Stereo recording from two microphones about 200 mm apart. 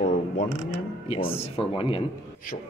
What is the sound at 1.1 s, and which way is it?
Speech, 30° left (ahead or behind).